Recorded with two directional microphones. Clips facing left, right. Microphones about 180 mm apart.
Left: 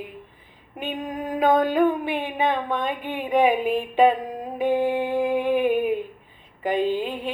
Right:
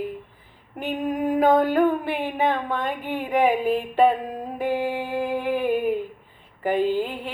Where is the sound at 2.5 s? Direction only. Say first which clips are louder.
Left 1 dB; 15° left (ahead or behind).